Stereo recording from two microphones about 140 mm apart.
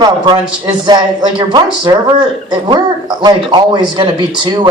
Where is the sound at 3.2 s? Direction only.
35° right (ahead or behind).